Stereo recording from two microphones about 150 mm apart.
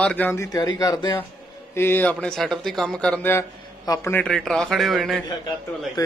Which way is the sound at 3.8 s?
25° left (ahead or behind).